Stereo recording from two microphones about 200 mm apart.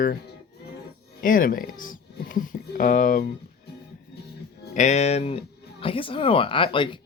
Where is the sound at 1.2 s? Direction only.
45° left (ahead or behind).